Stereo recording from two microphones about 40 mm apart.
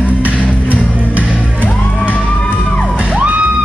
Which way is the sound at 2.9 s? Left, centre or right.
Right.